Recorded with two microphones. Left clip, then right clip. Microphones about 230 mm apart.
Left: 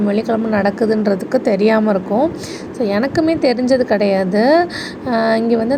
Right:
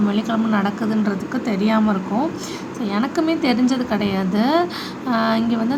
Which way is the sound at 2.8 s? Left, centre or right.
Centre.